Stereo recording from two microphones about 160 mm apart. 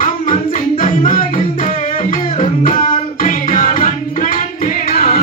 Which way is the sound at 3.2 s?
60° left (ahead or behind).